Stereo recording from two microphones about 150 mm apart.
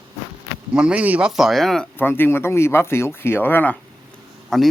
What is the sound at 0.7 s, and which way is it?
Speech, 5° right (ahead or behind).